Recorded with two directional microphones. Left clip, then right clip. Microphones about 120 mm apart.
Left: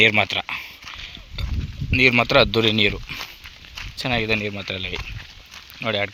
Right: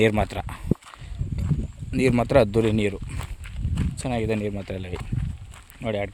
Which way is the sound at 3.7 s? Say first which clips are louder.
Left 5 dB; 15° right (ahead or behind).